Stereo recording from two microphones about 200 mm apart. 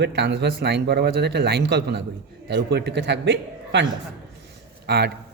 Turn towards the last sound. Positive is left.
turn(degrees=-55)  # may be behind; listen again after turning